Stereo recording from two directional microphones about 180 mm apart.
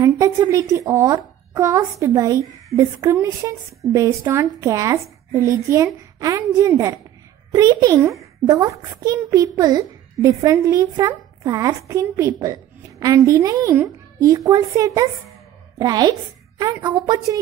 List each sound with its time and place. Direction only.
0.0 s a woman's voice: 20° right (ahead or behind)